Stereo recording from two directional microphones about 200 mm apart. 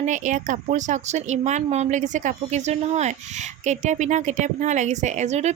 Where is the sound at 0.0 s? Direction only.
40° right (ahead or behind).